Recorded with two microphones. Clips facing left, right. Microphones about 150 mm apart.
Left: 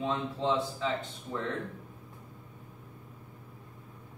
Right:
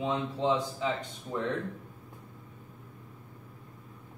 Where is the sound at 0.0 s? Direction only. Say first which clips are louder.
Right 1 dB; 15° right (ahead or behind).